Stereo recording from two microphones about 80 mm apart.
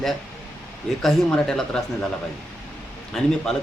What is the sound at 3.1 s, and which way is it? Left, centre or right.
Speech, centre.